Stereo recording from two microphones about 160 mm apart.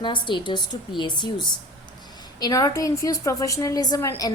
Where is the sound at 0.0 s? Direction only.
30° left (ahead or behind).